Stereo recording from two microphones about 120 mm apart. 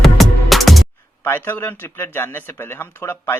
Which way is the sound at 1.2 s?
15° left (ahead or behind).